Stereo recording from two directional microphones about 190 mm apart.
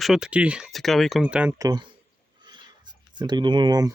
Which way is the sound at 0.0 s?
5° right (ahead or behind).